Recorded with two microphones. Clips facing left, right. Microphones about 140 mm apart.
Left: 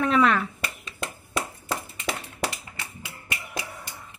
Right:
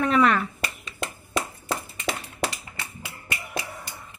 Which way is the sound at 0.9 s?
25° right (ahead or behind).